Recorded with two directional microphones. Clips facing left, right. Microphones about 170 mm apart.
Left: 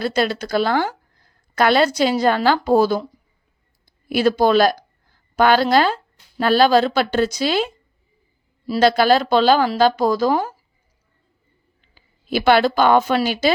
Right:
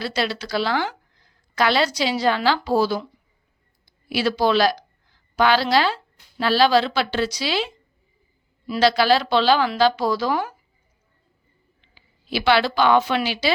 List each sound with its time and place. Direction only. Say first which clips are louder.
0.0 s a woman's voice: left 5 dB; 50° left (ahead or behind)
11.8 s a woman's voice: even; 45° left (ahead or behind)